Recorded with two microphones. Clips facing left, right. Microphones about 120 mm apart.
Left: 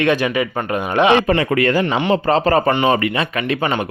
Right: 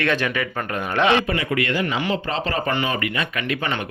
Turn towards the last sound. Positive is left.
turn(degrees=30)  # may be behind; listen again after turning